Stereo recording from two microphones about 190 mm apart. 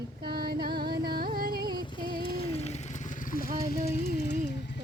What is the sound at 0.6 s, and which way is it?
Music, 55° right (ahead or behind).